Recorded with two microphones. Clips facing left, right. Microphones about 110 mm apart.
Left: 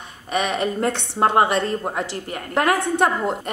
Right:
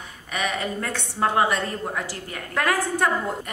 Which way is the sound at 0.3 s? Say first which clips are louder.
Left 5 dB; 20° left (ahead or behind).